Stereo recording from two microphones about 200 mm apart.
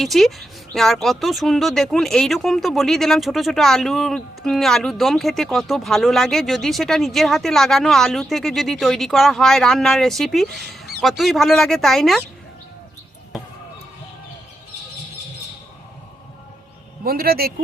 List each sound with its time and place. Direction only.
0.0 s speech: centre (ahead or behind)
17.0 s a man's voice: 50° right (ahead or behind)